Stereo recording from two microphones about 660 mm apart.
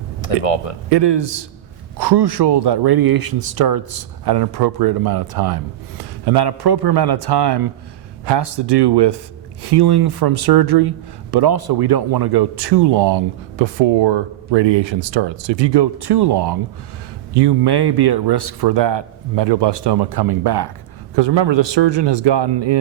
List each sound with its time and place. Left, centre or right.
0.4 s speech: left
0.9 s a man's voice: right